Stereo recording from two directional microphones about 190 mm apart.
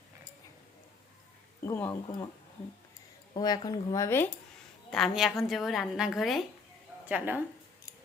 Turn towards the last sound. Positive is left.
turn(degrees=-10)  # may be behind; listen again after turning